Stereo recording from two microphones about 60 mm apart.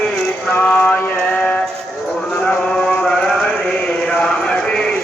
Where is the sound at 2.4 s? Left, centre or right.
Centre.